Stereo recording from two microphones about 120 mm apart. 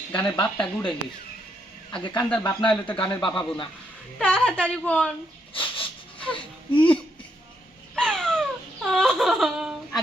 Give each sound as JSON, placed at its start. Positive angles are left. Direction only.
{"t": 0.1, "sound": "a woman's voice", "side_deg": 10}
{"t": 1.9, "sound": "speech", "side_deg": 40}
{"t": 2.5, "sound": "a woman's voice", "side_deg": 10}
{"t": 2.8, "sound": "a man's voice", "side_deg": 45}
{"t": 4.2, "sound": "a woman's voice", "side_deg": 10}
{"t": 5.5, "sound": "a sound", "side_deg": 45}
{"t": 6.3, "sound": "speech", "side_deg": 45}
{"t": 7.9, "sound": "a sound", "side_deg": 5}